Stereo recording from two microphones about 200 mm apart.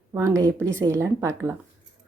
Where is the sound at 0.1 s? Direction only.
15° right (ahead or behind).